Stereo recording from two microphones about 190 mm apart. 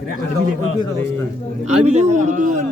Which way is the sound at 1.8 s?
35° right (ahead or behind).